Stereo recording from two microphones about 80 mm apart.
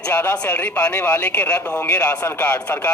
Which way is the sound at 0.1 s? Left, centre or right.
Left.